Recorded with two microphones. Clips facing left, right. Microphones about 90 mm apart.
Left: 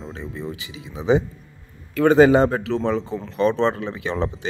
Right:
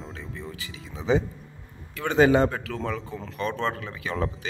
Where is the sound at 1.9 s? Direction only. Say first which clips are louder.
Left 6 dB; 40° left (ahead or behind).